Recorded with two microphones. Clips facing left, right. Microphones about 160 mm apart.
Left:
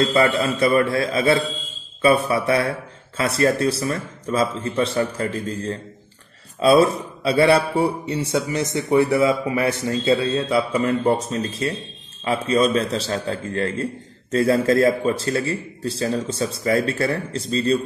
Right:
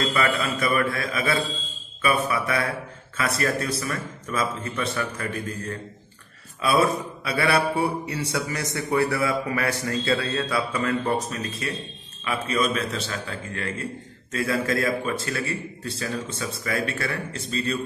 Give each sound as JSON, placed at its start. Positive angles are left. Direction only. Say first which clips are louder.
{"t": 0.0, "sound": "a man's voice", "louder": "left 6 dB", "side_deg": 30}